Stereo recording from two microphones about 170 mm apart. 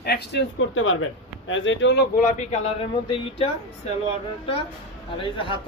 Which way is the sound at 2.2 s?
50° left (ahead or behind).